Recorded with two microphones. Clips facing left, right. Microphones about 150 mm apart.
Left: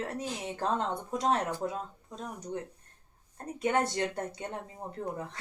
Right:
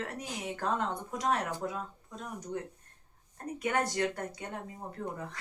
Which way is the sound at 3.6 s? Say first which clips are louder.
Left 2 dB; 25° left (ahead or behind).